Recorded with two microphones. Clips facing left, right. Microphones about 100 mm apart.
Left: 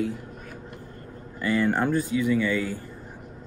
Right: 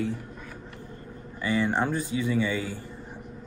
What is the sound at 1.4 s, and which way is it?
Speech, 15° right (ahead or behind).